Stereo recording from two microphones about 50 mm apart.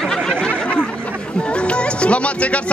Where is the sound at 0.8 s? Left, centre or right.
Left.